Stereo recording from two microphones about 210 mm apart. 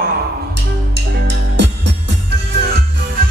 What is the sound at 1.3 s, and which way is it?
Music, 55° right (ahead or behind).